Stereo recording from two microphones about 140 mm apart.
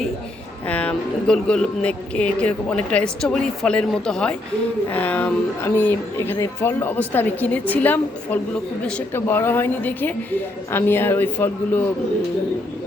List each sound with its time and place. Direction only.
0.7 s speech: 10° left (ahead or behind)